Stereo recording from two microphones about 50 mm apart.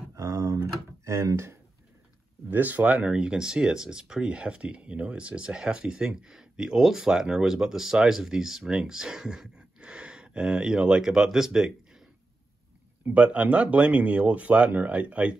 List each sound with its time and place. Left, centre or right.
0.1 s a sound: right
2.5 s speech: right; by 12.0 s centre
13.1 s speech: right